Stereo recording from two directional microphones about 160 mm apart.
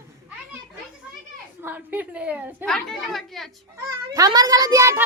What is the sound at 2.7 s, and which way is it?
Speech, centre (ahead or behind).